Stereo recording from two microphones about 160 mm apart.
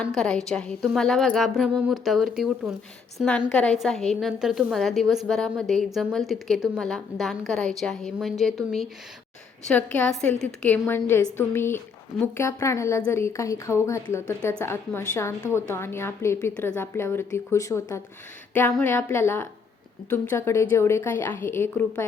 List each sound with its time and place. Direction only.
0.1 s a woman's voice: 5° left (ahead or behind)